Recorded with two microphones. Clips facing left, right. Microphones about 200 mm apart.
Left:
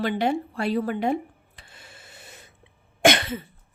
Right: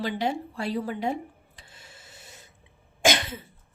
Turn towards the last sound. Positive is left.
turn(degrees=60)  # may be behind; listen again after turning